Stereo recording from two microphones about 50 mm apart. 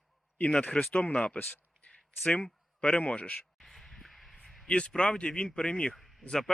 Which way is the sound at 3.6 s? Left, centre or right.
Centre.